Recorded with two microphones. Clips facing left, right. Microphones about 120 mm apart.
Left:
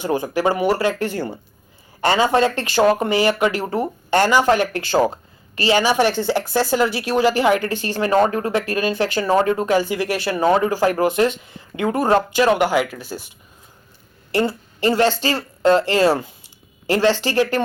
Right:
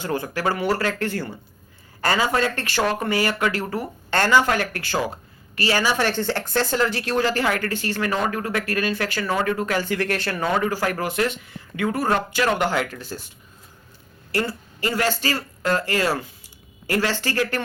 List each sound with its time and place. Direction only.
0.0 s a woman's voice: 15° left (ahead or behind)
9.8 s a woman's voice: 10° left (ahead or behind)
10.4 s speech: 30° left (ahead or behind); by 13.3 s 10° left (ahead or behind)
14.3 s speech: 25° left (ahead or behind)